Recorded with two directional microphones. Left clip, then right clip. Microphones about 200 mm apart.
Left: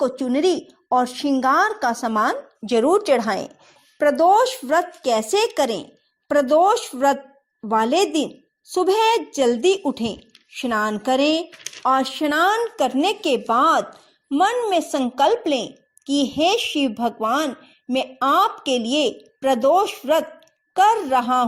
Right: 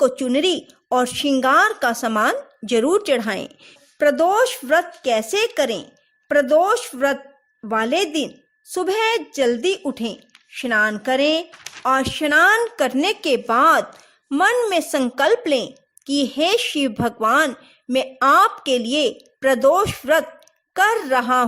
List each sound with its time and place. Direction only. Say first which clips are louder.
0.0 s a woman's voice: right 4 dB; 25° right (ahead or behind)
0.3 s speech: left 3 dB; 40° right (ahead or behind)
0.9 s a woman's voice: even; 25° right (ahead or behind)
1.5 s a woman's voice: right 3 dB; 40° right (ahead or behind)
3.9 s speech: left 1 dB; 15° right (ahead or behind)
12.2 s speech: right 8 dB; 35° right (ahead or behind)
12.7 s a woman's voice: even; 15° right (ahead or behind)